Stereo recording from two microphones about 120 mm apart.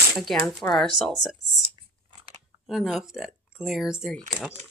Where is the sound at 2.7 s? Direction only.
Centre (ahead or behind).